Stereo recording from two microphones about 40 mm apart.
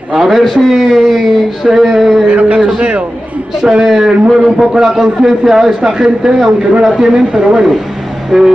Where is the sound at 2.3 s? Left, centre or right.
Right.